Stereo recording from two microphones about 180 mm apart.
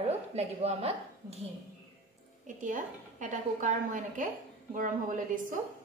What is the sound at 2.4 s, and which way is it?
A woman's voice, 45° right (ahead or behind).